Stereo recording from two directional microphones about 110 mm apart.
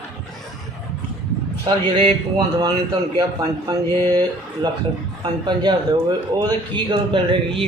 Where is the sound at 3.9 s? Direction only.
20° left (ahead or behind).